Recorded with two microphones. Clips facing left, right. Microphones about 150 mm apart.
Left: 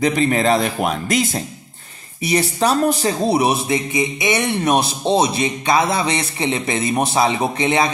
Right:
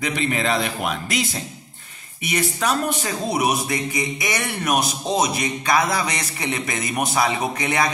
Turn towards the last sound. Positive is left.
turn(degrees=25)  # may be behind; listen again after turning